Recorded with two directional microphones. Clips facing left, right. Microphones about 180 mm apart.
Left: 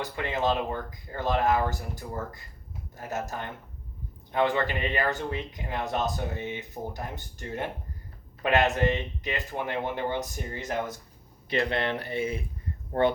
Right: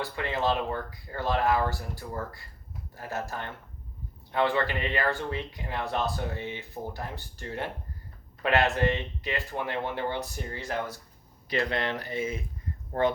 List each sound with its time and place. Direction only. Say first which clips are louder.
0.0 s speech: left 1 dB; 20° left (ahead or behind)